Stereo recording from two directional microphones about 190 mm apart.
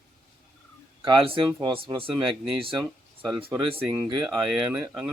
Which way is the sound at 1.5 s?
15° right (ahead or behind).